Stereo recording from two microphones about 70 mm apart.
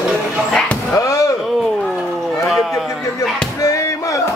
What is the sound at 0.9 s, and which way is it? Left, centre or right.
Slam, left.